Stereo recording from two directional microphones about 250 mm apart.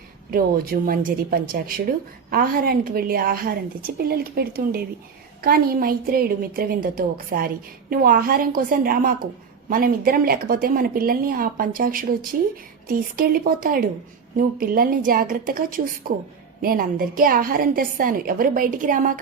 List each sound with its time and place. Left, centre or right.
0.3 s a woman's voice: right